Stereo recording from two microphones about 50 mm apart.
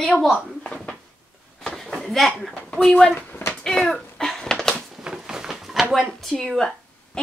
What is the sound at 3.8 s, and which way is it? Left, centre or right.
Cat, centre.